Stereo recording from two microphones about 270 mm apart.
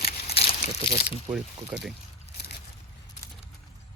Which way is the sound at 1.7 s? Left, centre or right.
Centre.